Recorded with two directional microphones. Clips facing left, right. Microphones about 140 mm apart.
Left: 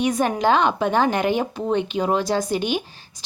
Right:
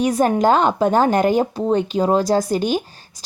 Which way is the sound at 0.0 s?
40° right (ahead or behind).